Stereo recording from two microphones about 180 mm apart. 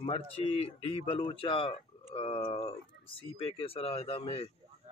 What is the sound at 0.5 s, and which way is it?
Speech, 30° left (ahead or behind).